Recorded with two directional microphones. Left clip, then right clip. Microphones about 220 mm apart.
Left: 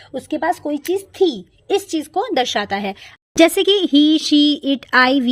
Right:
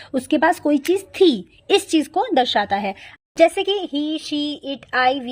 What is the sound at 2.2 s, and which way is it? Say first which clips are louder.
Speech: left 1 dB; centre (ahead or behind).